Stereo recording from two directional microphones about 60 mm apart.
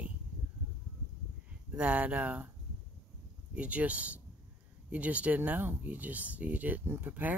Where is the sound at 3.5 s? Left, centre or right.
Right.